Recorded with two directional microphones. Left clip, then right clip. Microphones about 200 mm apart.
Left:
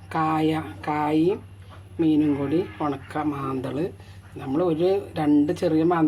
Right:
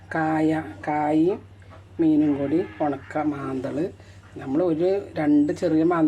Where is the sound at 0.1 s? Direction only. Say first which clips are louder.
Even; 30° left (ahead or behind).